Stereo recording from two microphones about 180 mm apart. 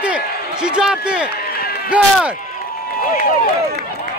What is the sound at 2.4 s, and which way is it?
Run, 45° left (ahead or behind).